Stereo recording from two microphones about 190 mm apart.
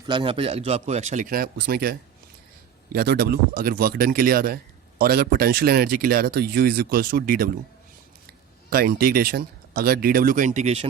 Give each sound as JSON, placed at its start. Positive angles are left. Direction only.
{"t": 0.1, "sound": "a man's voice", "side_deg": -25}
{"t": 8.7, "sound": "speech", "side_deg": -50}